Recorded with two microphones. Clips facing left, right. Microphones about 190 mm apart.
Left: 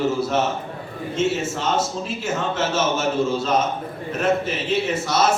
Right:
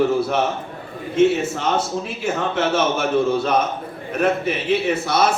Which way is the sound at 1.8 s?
60° right (ahead or behind).